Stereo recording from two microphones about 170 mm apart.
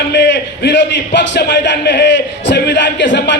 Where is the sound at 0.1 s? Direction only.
90° left.